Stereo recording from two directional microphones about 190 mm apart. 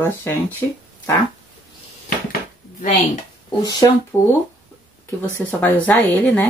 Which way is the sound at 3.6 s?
15° left (ahead or behind).